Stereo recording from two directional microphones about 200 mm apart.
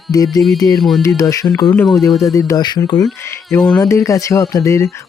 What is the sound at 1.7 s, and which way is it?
Speech, 5° left (ahead or behind).